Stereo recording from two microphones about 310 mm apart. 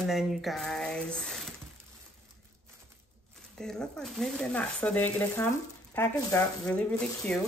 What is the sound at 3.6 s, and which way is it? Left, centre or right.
Speech, centre.